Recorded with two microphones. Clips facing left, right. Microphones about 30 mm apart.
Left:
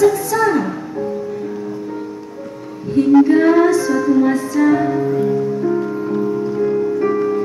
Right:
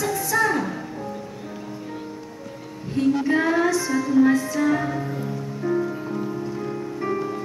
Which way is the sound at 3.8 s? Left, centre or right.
Centre.